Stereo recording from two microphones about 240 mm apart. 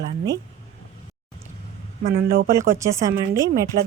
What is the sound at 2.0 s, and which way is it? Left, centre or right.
Speech, right.